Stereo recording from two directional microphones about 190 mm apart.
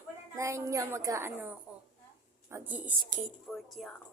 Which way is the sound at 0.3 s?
15° right (ahead or behind).